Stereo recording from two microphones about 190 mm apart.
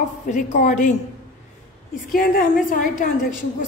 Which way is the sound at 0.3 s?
40° left (ahead or behind).